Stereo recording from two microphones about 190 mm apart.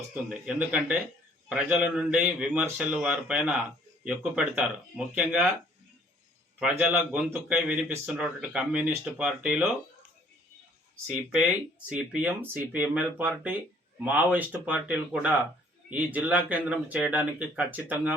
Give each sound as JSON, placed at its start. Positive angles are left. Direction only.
{"t": 0.1, "sound": "a man's voice", "side_deg": -5}
{"t": 6.6, "sound": "speech", "side_deg": -5}
{"t": 11.9, "sound": "speech", "side_deg": -5}